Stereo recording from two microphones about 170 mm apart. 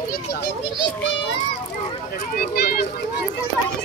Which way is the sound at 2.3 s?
65° left (ahead or behind).